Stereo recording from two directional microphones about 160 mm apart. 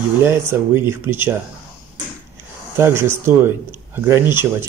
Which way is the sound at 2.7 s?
15° right (ahead or behind).